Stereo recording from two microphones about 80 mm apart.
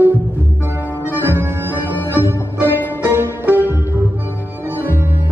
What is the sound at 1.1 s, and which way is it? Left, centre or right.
Music, right.